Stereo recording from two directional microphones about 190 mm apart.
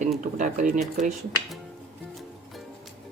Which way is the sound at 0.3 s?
40° right (ahead or behind).